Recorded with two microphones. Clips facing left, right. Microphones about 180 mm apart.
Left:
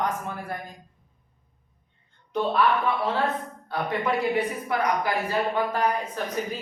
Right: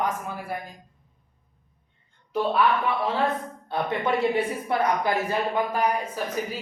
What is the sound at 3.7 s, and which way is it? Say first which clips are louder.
Speech: right 1 dB; 25° right (ahead or behind).